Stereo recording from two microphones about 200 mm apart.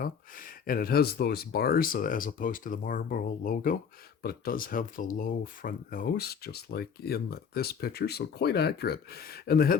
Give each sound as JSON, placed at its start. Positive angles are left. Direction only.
{"t": 0.0, "sound": "speech", "side_deg": 45}